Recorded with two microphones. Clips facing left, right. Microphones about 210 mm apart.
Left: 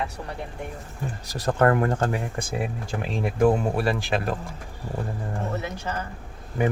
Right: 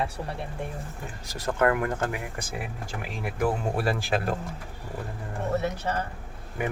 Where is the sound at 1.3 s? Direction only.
40° left (ahead or behind).